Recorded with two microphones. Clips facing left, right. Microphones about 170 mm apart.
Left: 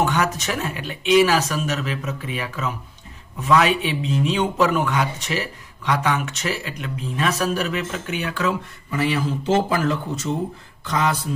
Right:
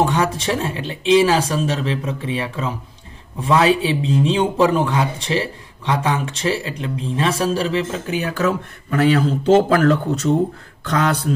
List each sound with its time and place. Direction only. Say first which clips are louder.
0.0 s speech: right 3 dB; 30° right (ahead or behind)
9.5 s speech: right 7 dB; 65° right (ahead or behind)